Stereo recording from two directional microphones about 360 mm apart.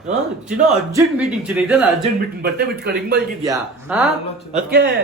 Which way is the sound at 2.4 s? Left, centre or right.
Right.